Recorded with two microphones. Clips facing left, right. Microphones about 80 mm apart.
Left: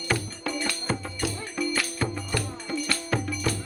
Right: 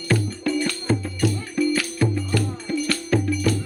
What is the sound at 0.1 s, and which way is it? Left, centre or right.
Music, centre.